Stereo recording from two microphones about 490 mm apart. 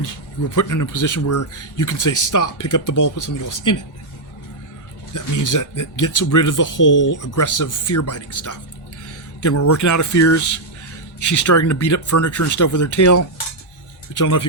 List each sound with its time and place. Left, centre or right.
0.5 s speech: left
5.1 s speech: left